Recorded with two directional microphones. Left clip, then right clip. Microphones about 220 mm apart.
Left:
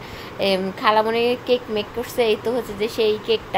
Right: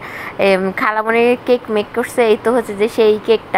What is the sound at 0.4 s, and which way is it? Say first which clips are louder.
A woman's voice: right 7 dB; 15° right (ahead or behind).